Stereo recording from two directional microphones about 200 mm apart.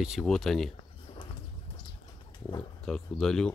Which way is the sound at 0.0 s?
Centre (ahead or behind).